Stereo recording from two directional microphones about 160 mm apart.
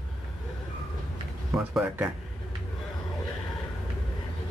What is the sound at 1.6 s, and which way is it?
Speech, 5° right (ahead or behind).